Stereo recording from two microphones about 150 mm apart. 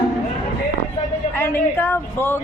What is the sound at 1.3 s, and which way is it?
Speech, 15° left (ahead or behind).